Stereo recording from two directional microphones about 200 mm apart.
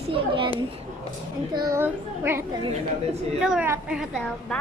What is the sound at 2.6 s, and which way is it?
Speech, 30° right (ahead or behind).